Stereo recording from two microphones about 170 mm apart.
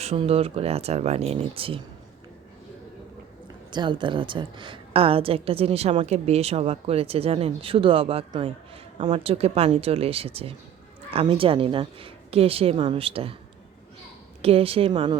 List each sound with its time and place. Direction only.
0.0 s a woman's voice: 35° right (ahead or behind)
3.7 s a woman's voice: 25° right (ahead or behind)
14.4 s a woman's voice: 35° right (ahead or behind)